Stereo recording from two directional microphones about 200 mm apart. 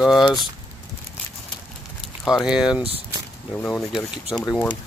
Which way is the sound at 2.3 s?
Centre (ahead or behind).